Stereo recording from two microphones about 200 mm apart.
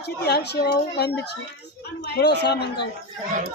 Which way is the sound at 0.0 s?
55° left (ahead or behind).